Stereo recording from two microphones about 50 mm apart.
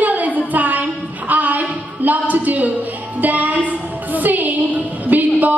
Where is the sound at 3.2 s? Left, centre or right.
Right.